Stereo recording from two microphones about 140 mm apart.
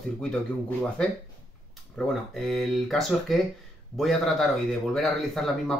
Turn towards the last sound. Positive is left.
turn(degrees=0)  # may be behind; listen again after turning